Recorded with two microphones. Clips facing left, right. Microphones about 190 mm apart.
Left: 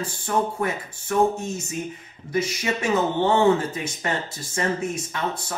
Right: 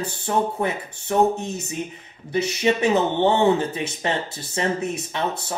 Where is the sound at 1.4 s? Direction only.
65° right (ahead or behind).